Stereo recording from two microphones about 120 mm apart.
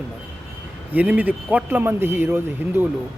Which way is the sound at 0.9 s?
15° right (ahead or behind).